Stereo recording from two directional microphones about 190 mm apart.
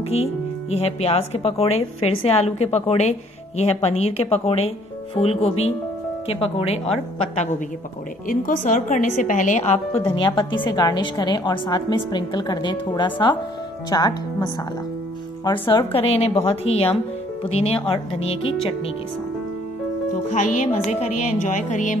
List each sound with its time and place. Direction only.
0.1 s speech: 35° left (ahead or behind)
8.3 s speech: 45° left (ahead or behind)
10.0 s a woman's voice: 25° left (ahead or behind)
18.2 s speech: 90° left
20.2 s speech: 40° left (ahead or behind)